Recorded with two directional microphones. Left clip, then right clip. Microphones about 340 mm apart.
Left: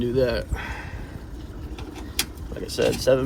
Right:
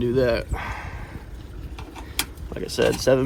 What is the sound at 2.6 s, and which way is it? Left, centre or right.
Speech, centre.